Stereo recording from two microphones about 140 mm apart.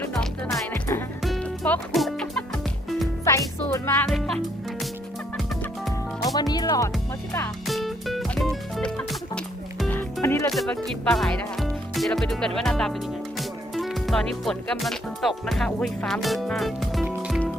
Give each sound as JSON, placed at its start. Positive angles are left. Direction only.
{"t": 0.1, "sound": "music", "side_deg": 0}
{"t": 3.2, "sound": "music", "side_deg": 20}
{"t": 5.4, "sound": "music", "side_deg": 0}
{"t": 6.3, "sound": "music", "side_deg": 30}
{"t": 7.7, "sound": "music", "side_deg": 0}
{"t": 9.9, "sound": "music", "side_deg": 15}
{"t": 10.5, "sound": "speech", "side_deg": 0}
{"t": 12.5, "sound": "music", "side_deg": 5}
{"t": 16.2, "sound": "speech", "side_deg": 0}